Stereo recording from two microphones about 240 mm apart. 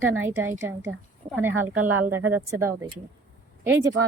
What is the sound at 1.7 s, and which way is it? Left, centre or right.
Speech, right.